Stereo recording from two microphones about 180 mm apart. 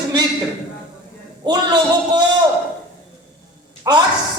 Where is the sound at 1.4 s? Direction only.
25° right (ahead or behind).